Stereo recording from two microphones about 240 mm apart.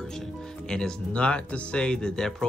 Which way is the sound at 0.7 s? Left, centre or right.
Centre.